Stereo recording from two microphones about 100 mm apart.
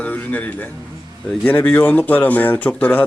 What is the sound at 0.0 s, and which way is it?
Speech, 15° left (ahead or behind).